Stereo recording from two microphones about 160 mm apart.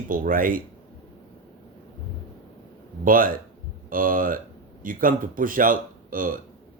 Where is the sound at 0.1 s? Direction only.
60° right (ahead or behind).